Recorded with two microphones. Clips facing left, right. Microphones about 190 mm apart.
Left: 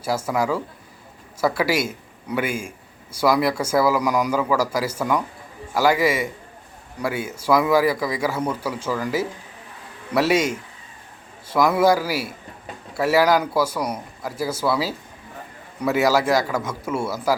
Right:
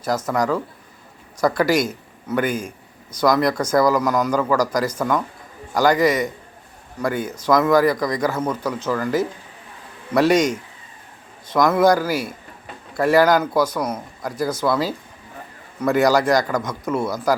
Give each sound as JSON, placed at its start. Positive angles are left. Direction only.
{"t": 0.0, "sound": "a man's voice", "side_deg": 10}